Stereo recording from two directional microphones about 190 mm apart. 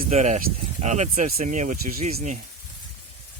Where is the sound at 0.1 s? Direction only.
35° right (ahead or behind).